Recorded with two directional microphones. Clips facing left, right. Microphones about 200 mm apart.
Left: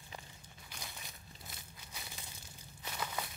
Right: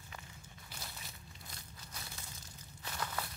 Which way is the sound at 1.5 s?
5° left (ahead or behind).